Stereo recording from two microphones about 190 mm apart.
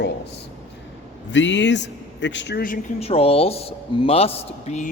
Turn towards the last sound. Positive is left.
turn(degrees=35)  # may be behind; listen again after turning